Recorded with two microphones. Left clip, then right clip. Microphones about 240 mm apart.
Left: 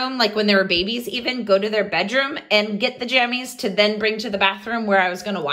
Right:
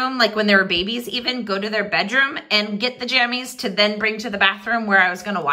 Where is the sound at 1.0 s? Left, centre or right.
Centre.